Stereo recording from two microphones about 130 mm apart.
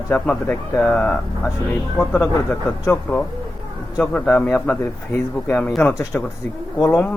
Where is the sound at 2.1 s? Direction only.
15° left (ahead or behind).